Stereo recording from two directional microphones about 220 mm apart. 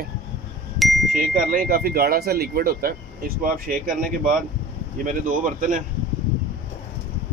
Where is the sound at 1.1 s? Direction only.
40° right (ahead or behind).